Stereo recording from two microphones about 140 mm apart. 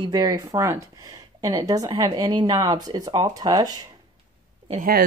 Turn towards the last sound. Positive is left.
turn(degrees=-90)